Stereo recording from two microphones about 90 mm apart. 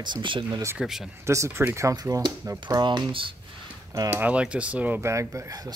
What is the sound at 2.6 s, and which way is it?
Speech, 60° right (ahead or behind).